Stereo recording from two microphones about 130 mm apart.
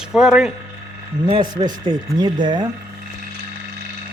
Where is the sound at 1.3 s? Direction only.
35° right (ahead or behind).